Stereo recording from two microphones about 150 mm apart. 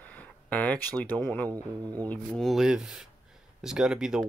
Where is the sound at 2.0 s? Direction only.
Centre (ahead or behind).